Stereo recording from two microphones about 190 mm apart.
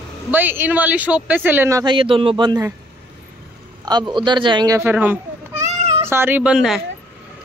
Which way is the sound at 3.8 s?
20° right (ahead or behind).